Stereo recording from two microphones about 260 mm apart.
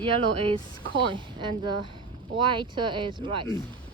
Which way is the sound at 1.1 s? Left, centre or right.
Centre.